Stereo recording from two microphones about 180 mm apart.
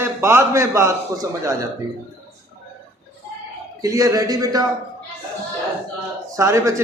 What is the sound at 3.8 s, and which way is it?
Speech, 20° right (ahead or behind).